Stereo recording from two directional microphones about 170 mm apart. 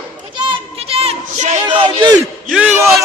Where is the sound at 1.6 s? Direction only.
25° right (ahead or behind).